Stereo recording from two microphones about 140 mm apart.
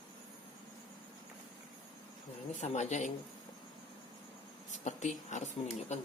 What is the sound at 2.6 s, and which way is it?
Speech, 55° left (ahead or behind).